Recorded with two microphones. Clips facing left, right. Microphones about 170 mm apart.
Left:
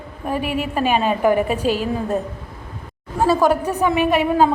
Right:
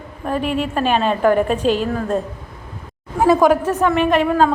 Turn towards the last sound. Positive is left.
turn(degrees=10)  # may be behind; listen again after turning